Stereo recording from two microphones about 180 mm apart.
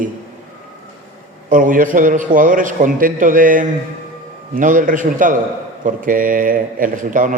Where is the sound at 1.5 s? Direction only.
50° right (ahead or behind).